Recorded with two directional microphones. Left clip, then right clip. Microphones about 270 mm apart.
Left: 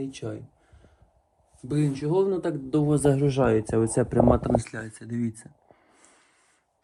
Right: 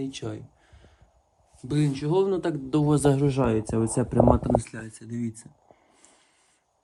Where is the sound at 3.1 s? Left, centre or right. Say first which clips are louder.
Even; right.